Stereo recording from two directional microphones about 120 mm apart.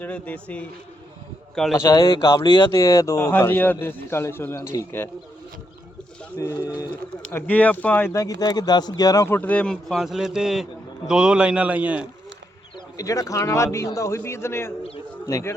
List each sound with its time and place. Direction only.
0.0 s speech: 15° left (ahead or behind)
1.7 s speech: 30° left (ahead or behind)
2.7 s a man's voice: 25° left (ahead or behind)
6.3 s a man's voice: 25° left (ahead or behind)
7.3 s speech: 15° left (ahead or behind)
8.1 s a man's voice: 30° left (ahead or behind); by 12.0 s 10° right (ahead or behind)
13.0 s a man's voice: 30° left (ahead or behind)